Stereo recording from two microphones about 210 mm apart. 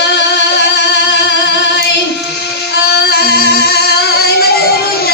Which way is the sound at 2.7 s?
50° left (ahead or behind).